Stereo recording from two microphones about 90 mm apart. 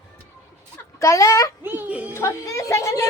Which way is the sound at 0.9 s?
35° left (ahead or behind).